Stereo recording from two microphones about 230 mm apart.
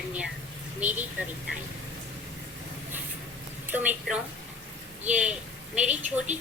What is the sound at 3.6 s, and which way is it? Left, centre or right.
Speech, centre.